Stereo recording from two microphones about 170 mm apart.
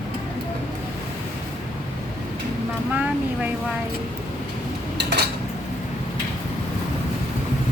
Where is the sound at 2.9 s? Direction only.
10° right (ahead or behind).